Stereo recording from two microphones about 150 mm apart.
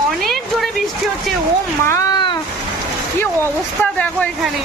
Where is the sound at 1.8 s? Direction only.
20° left (ahead or behind).